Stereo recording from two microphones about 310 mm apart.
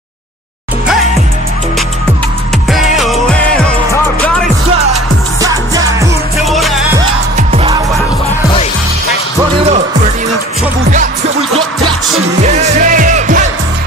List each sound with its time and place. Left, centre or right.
2.7 s music: centre
5.4 s music: centre
7.3 s music: centre
10.8 s music: right
12.4 s music: right